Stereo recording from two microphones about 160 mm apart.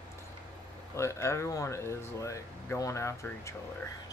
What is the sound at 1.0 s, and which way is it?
Speech, 15° left (ahead or behind).